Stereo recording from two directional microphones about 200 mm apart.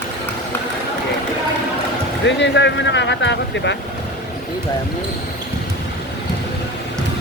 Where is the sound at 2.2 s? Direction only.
60° left (ahead or behind).